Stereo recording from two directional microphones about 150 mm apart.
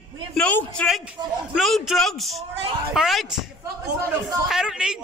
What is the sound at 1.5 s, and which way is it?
A man's voice, centre (ahead or behind).